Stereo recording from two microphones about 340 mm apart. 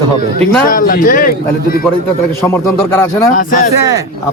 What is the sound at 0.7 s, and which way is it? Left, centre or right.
Speech, left.